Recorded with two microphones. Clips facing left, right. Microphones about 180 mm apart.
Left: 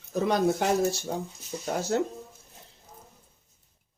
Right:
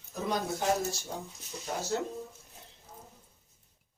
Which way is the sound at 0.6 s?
70° left (ahead or behind).